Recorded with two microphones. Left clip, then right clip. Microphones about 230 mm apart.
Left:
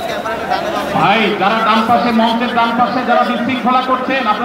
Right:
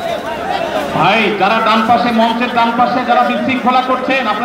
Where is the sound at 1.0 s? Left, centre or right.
Right.